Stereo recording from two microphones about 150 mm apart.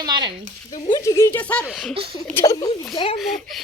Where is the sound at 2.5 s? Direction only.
30° left (ahead or behind).